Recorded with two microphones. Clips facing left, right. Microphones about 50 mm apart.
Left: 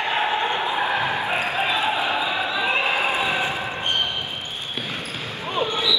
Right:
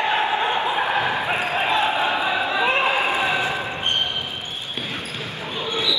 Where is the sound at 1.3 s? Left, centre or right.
Right.